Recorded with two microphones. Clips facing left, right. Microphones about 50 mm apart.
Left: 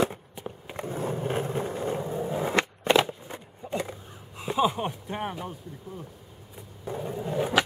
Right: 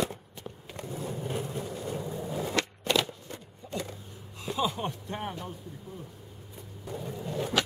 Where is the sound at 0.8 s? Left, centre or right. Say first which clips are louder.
Left 6 dB; left; by 5.5 s centre.